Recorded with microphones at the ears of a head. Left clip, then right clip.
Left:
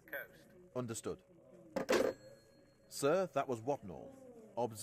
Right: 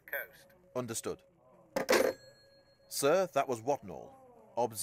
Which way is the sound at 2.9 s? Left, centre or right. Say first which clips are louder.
Right 5 dB; right.